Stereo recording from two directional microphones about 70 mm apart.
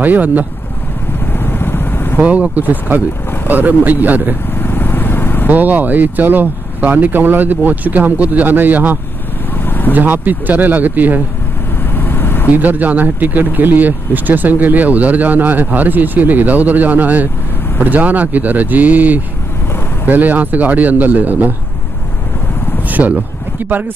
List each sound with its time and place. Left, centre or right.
0.0 s speech: right
1.2 s vehicle: left
2.1 s speech: right
4.6 s vehicle: left
5.5 s speech: right
9.7 s vehicle: left
9.9 s speech: right
11.9 s vehicle: left
12.5 s speech: right
22.8 s a sound: right